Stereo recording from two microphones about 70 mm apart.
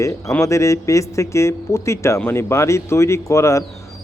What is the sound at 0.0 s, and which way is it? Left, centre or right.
A man's voice, left.